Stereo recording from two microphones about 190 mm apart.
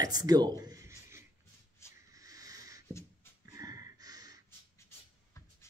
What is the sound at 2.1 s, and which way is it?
Owl, 20° right (ahead or behind).